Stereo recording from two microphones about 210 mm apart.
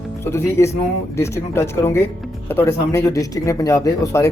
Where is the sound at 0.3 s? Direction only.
10° left (ahead or behind).